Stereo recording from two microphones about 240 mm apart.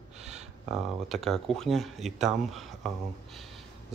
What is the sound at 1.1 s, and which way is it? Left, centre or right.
Speech, centre.